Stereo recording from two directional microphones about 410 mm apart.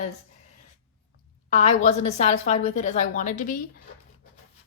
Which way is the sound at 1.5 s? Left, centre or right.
Centre.